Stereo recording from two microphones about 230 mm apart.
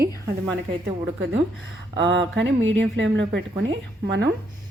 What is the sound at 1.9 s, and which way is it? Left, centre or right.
A woman's voice, right.